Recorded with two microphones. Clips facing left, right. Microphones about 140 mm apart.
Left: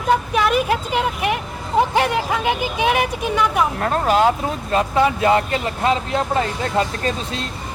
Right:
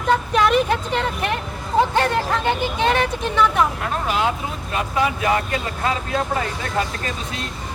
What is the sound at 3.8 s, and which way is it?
Speech, 40° left (ahead or behind).